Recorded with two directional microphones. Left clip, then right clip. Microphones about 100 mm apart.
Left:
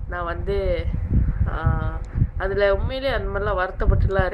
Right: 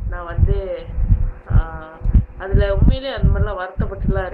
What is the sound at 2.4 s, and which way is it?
Speech, 30° left (ahead or behind).